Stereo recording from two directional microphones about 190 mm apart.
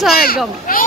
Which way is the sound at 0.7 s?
45° left (ahead or behind).